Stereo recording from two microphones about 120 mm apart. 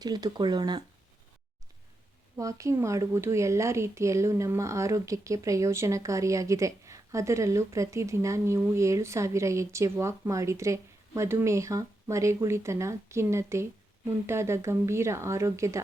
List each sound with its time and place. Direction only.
0.0 s speech: 35° right (ahead or behind)
2.3 s a woman's voice: 25° right (ahead or behind)